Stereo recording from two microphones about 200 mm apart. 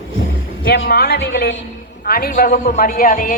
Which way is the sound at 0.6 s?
55° left (ahead or behind).